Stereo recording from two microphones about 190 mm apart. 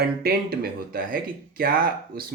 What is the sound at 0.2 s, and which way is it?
Speech, 55° right (ahead or behind).